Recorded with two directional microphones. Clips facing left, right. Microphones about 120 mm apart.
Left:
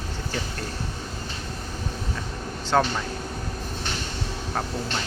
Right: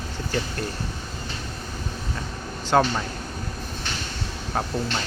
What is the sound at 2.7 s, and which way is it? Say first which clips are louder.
Speech: right 2 dB; 5° right (ahead or behind).